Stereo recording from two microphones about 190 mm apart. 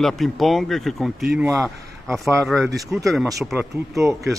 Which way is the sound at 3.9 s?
15° right (ahead or behind).